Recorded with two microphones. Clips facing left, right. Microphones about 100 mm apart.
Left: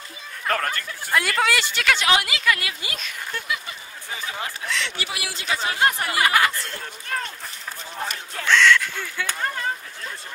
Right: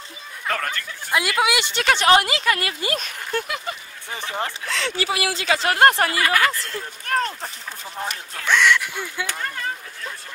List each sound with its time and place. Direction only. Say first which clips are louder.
0.5 s speech: left 1 dB; 5° left (ahead or behind)
1.1 s speech: right 1 dB; 10° right (ahead or behind)
1.8 s speech: right 6 dB; 35° right (ahead or behind); by 3.7 s 50° right (ahead or behind)
4.6 s speech: right 3 dB; 40° right (ahead or behind)
5.2 s speech: right 4 dB; 80° right; by 6.0 s 65° right (ahead or behind)
6.1 s speech: left 1 dB; 20° left (ahead or behind)
7.1 s a sound: right 6 dB; 60° right (ahead or behind)
8.5 s speech: left 1 dB; 15° right (ahead or behind)